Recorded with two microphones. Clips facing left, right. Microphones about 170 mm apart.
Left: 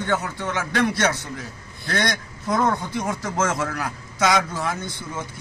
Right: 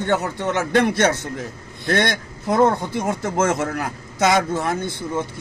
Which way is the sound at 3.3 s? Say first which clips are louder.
Right 4 dB; 55° right (ahead or behind).